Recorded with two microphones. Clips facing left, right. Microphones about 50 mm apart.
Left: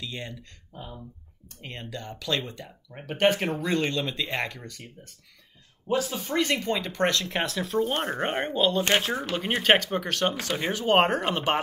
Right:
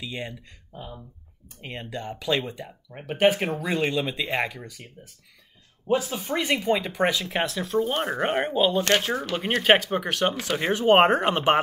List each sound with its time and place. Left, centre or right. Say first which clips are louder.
0.0 s speech: right 3 dB; centre
0.7 s speech: right 1 dB; centre; by 11.6 s right